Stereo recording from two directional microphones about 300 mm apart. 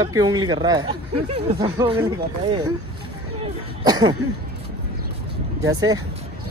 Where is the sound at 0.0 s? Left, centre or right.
Centre.